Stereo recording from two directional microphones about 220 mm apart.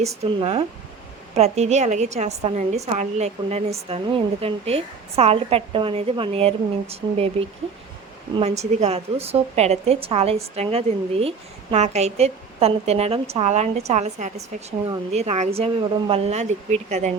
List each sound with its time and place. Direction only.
0.0 s a woman's voice: 30° right (ahead or behind)